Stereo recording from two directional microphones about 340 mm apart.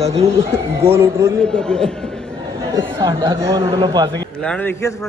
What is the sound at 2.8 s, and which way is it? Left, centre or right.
Speech, centre.